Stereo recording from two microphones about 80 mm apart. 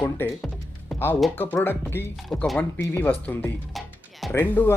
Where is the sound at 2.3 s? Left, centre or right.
Centre.